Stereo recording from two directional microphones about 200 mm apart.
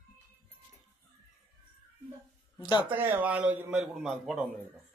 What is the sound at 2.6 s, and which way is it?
Speech, 20° left (ahead or behind).